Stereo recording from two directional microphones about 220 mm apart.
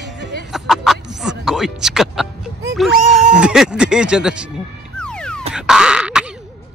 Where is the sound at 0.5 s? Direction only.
Centre (ahead or behind).